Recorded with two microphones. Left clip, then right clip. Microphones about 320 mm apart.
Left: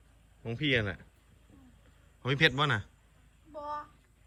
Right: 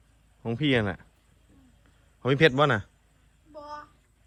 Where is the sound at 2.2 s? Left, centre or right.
Centre.